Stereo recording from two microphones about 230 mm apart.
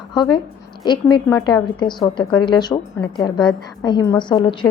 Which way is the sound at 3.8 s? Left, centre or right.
Centre.